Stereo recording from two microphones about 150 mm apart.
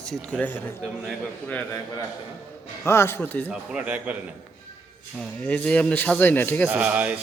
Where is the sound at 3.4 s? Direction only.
10° right (ahead or behind).